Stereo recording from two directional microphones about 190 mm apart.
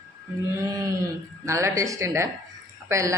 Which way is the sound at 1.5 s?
15° right (ahead or behind).